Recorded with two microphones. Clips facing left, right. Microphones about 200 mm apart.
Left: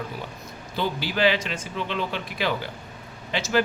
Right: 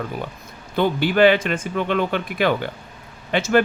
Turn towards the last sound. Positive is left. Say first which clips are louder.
# right 7 dB
turn(degrees=-55)  # may be behind; listen again after turning